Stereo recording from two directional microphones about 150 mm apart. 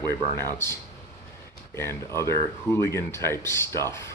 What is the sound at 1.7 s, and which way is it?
Speech, 15° left (ahead or behind).